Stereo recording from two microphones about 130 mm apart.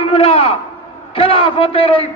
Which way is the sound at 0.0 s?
50° left (ahead or behind).